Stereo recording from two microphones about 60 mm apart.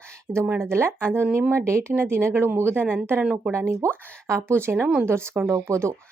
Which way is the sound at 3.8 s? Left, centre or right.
Right.